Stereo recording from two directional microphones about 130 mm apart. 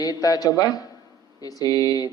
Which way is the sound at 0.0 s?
30° left (ahead or behind).